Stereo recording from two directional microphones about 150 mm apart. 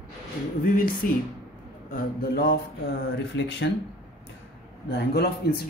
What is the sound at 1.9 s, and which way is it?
Speech, 85° left.